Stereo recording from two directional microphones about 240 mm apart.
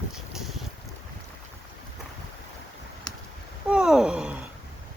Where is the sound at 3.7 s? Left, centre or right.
Centre.